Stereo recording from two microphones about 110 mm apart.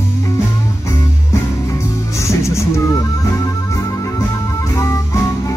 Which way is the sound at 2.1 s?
25° left (ahead or behind).